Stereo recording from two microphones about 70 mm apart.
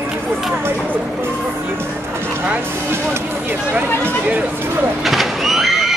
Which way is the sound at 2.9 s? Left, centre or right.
Right.